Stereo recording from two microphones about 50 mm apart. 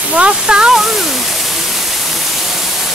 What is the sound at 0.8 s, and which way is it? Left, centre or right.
Speech, centre.